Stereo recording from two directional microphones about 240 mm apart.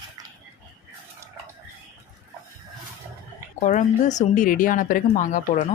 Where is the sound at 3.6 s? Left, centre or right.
Left.